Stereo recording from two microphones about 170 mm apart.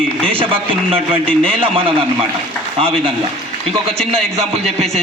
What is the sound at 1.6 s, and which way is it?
Speech, 30° right (ahead or behind).